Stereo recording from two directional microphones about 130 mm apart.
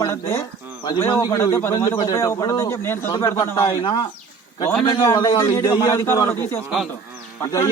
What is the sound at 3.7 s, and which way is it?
Speech, 40° left (ahead or behind).